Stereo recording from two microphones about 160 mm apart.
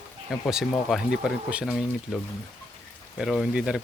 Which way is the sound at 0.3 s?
Centre (ahead or behind).